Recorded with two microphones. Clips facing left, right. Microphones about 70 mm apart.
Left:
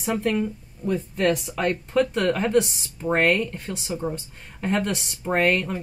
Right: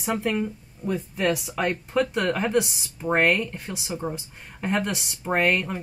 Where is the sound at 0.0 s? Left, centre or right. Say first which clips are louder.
Left 2 dB; centre.